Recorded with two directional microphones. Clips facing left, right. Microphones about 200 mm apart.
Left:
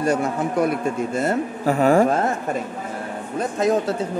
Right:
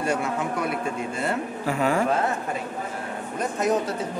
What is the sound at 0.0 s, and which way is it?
A man's voice, 40° left (ahead or behind).